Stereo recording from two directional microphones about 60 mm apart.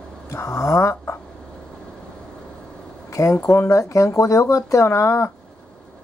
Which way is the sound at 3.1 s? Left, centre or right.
Left.